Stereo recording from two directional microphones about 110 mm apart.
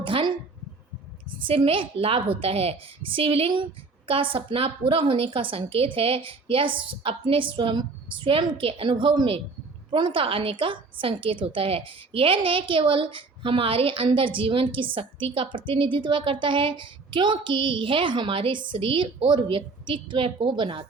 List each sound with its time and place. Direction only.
0.0 s a woman's voice: 50° right (ahead or behind)